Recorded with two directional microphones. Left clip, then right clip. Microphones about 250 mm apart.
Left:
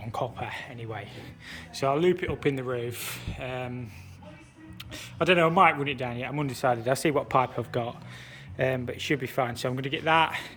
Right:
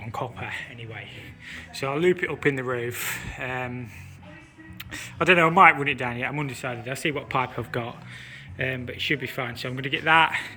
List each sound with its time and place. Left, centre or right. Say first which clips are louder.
0.0 s speech: even; centre
4.9 s speech: right 4 dB; centre
6.5 s speech: left 6 dB; left